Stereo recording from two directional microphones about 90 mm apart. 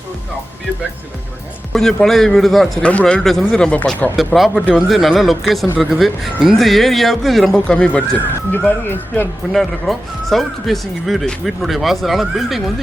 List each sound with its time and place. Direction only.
1.7 s speech: 5° left (ahead or behind)
2.8 s speech: 10° left (ahead or behind)
4.4 s speech: centre (ahead or behind)
8.5 s speech: 20° left (ahead or behind)
9.5 s speech: centre (ahead or behind)